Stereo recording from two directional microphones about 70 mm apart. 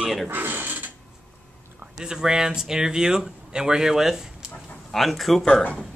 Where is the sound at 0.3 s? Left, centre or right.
Right.